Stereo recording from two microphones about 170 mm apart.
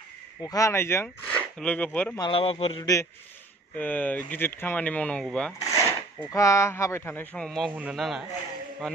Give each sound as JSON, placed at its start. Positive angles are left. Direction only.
{"t": 0.4, "sound": "speech", "side_deg": 20}
{"t": 2.1, "sound": "speech", "side_deg": 30}
{"t": 2.8, "sound": "a man's voice", "side_deg": 20}
{"t": 5.6, "sound": "a man's voice", "side_deg": 20}